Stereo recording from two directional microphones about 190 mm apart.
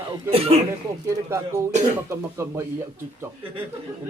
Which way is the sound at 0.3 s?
30° right (ahead or behind).